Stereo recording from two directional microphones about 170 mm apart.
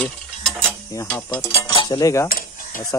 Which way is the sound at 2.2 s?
55° left (ahead or behind).